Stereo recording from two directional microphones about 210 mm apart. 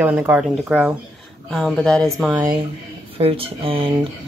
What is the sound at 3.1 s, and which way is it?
Speech, 25° right (ahead or behind).